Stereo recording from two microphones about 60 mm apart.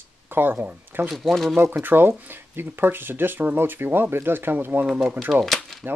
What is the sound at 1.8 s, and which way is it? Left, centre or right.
Speech, right.